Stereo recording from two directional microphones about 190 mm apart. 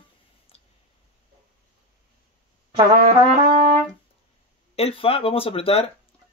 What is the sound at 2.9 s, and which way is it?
Brass instrument, 50° right (ahead or behind).